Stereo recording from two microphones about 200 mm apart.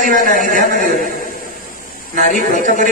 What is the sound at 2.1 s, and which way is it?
Speech, 40° right (ahead or behind).